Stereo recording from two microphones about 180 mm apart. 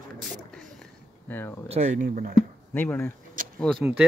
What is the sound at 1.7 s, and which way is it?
Speech, 40° right (ahead or behind).